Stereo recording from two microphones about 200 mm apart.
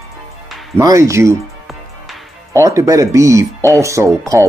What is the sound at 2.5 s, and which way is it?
Speech, 15° right (ahead or behind).